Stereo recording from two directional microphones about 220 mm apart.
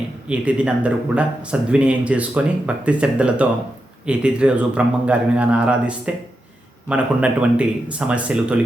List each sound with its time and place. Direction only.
0.3 s speech: 5° right (ahead or behind)